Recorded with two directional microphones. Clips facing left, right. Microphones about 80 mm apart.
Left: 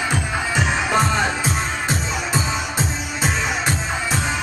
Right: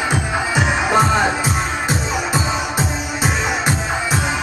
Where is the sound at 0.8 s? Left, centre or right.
Centre.